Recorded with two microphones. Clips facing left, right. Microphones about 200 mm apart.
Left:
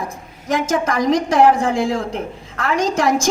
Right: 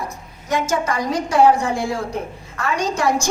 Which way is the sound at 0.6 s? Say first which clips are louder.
Left 3 dB; 90° left.